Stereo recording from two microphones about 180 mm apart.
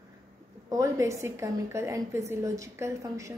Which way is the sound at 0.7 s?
20° right (ahead or behind).